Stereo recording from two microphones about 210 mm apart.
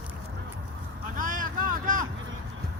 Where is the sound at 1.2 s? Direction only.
40° right (ahead or behind).